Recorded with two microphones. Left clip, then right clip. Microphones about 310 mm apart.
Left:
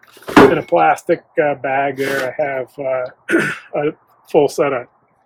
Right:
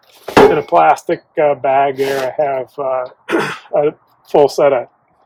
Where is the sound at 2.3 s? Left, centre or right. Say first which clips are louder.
Right 3 dB; centre.